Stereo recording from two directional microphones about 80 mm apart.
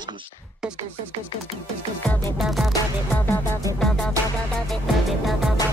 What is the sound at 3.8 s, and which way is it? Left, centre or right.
Music, centre.